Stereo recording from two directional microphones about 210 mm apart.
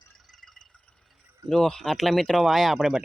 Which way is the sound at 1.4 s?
Centre (ahead or behind).